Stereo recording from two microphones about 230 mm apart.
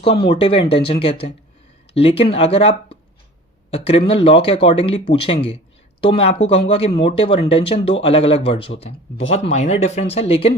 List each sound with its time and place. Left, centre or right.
0.0 s speech: left